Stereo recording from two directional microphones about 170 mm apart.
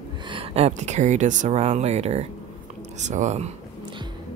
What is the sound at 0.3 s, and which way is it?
Speech, 35° right (ahead or behind).